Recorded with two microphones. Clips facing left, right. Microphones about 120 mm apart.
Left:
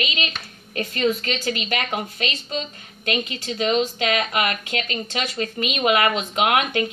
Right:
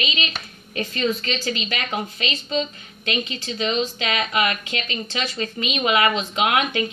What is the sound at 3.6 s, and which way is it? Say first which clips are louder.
Speech: left 3 dB; 50° left (ahead or behind).